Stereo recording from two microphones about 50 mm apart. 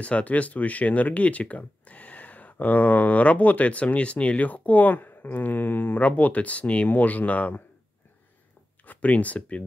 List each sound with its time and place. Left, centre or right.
0.0 s speech: left
8.8 s speech: left